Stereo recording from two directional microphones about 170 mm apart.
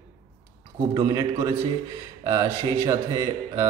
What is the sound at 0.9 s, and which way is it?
Mantra, 25° right (ahead or behind).